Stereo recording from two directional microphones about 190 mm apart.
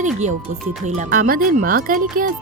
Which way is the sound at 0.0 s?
40° right (ahead or behind).